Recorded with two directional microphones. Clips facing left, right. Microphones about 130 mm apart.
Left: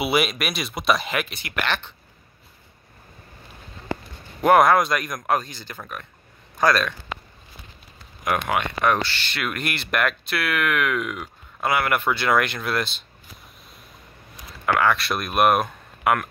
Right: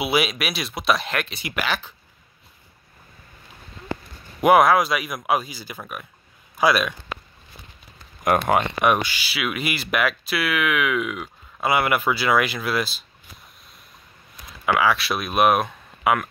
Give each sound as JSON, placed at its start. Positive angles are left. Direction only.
{"t": 0.0, "sound": "speech", "side_deg": 0}
{"t": 4.4, "sound": "speech", "side_deg": -5}
{"t": 8.3, "sound": "speech", "side_deg": -40}
{"t": 8.8, "sound": "speech", "side_deg": -15}
{"t": 14.7, "sound": "speech", "side_deg": -5}